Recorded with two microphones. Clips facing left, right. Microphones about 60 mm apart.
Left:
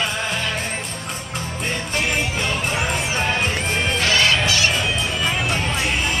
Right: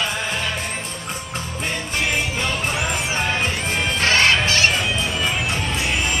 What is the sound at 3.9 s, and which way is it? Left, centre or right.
Music, right.